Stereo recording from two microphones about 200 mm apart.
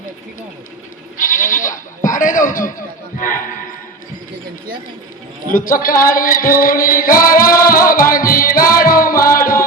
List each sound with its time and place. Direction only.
1.2 s goat: 40° left (ahead or behind)
2.0 s a sound: 40° left (ahead or behind)
5.5 s music: 45° left (ahead or behind)